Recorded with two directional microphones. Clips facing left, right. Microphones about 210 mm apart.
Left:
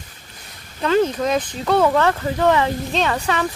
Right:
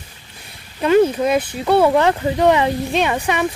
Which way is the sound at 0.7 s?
15° right (ahead or behind).